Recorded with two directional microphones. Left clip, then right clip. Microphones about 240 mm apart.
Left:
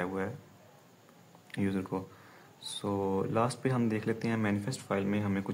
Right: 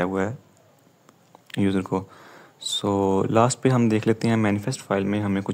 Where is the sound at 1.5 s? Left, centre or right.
Right.